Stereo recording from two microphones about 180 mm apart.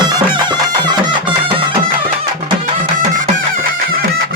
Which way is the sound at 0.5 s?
25° right (ahead or behind).